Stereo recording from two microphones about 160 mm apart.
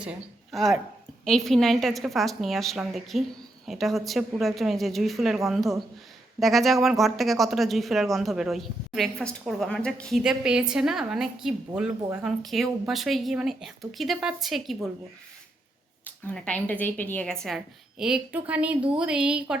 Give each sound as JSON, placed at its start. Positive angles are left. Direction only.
{"t": 0.0, "sound": "speech", "side_deg": -5}
{"t": 16.0, "sound": "a woman's voice", "side_deg": 10}
{"t": 17.4, "sound": "speech", "side_deg": 0}